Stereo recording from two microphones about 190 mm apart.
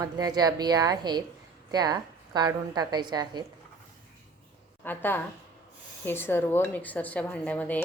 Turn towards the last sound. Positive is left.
turn(degrees=10)  # may be behind; listen again after turning